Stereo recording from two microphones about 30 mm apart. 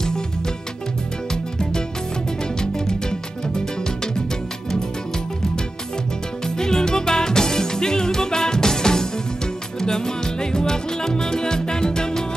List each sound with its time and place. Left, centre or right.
1.3 s music: left
6.4 s music: left